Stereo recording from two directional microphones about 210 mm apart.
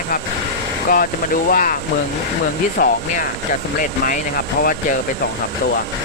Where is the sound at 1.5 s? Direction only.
40° left (ahead or behind).